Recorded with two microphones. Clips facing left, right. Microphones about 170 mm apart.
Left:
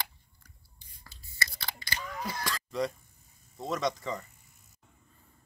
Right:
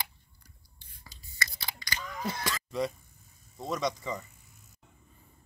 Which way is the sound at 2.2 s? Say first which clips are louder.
Right 3 dB; 25° right (ahead or behind).